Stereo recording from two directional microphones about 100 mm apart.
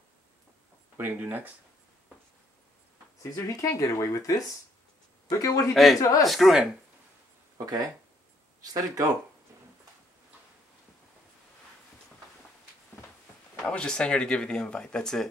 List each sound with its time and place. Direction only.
0.9 s speech: 20° right (ahead or behind)
3.2 s speech: 30° left (ahead or behind)
6.2 s speech: centre (ahead or behind)
7.5 s speech: 40° right (ahead or behind)
13.7 s speech: 10° left (ahead or behind)